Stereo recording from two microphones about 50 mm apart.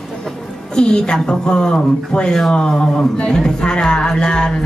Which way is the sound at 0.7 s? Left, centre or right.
Centre.